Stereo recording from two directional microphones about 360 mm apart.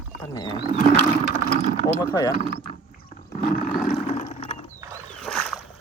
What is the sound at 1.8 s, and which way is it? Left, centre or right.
Speech, centre.